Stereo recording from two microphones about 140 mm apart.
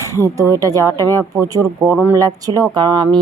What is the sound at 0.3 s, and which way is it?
Speech, 25° right (ahead or behind).